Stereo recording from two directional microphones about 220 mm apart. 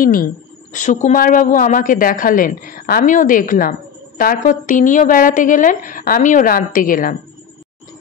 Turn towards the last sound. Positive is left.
turn(degrees=40)  # may be behind; listen again after turning